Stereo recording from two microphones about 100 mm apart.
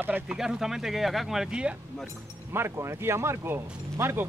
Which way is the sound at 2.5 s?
25° right (ahead or behind).